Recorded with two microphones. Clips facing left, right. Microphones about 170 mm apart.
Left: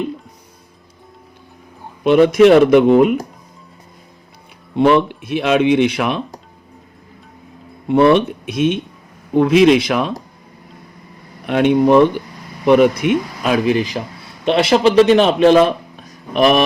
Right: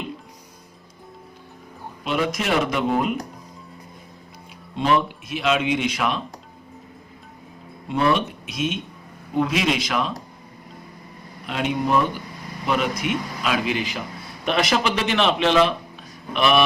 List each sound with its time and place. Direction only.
2.0 s speech: 55° left (ahead or behind)
4.7 s speech: 65° left (ahead or behind)
7.9 s speech: 60° left (ahead or behind)
11.4 s speech: 60° left (ahead or behind); by 14.0 s 40° left (ahead or behind)
14.4 s a man's voice: 30° left (ahead or behind)